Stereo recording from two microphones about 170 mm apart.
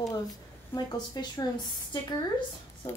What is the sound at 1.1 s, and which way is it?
Speech, 25° left (ahead or behind).